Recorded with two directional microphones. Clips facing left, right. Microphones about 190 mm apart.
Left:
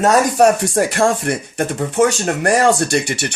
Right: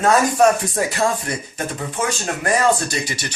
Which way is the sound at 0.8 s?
60° left (ahead or behind).